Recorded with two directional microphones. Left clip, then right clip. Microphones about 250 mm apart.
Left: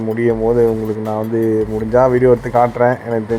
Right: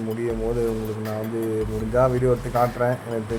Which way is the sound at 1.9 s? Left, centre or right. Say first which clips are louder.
Left 9 dB; centre.